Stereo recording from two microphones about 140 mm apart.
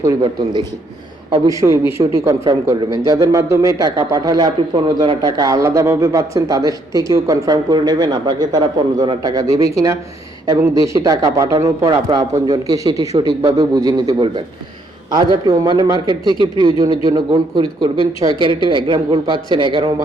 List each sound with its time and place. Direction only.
1.5 s a man's voice: 20° right (ahead or behind)